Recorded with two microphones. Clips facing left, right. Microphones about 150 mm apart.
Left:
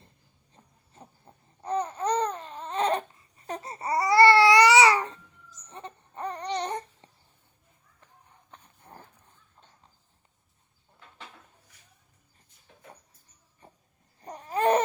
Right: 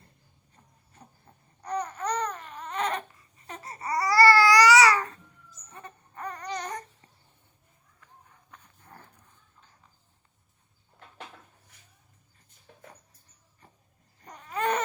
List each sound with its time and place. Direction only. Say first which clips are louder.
1.3 s babbling: left 3 dB; 25° left (ahead or behind)
1.6 s baby cry: left 3 dB; 25° left (ahead or behind)
3.6 s babbling: left 1 dB; 25° left (ahead or behind)
5.7 s a sound: left 4 dB; 25° left (ahead or behind)
8.4 s a sound: left 3 dB; 25° left (ahead or behind)
14.3 s babbling: left 5 dB; 30° left (ahead or behind)